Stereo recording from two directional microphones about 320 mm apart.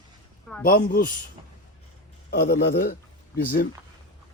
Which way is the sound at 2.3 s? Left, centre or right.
Left.